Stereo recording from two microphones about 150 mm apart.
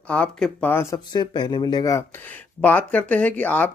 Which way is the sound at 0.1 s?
10° left (ahead or behind).